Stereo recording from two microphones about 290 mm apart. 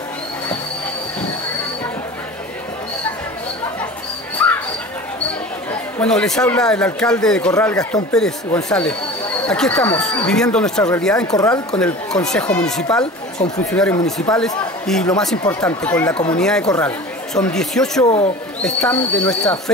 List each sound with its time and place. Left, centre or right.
4.4 s dog: centre
5.7 s a man's voice: centre
11.8 s a man's voice: centre
15.4 s a man's voice: centre
18.0 s speech: left
18.6 s a man's voice: centre